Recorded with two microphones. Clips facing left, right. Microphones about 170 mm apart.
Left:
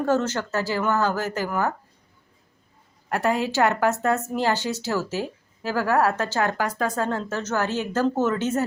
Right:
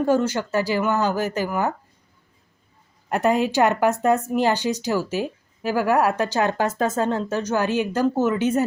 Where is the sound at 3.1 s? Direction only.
20° right (ahead or behind).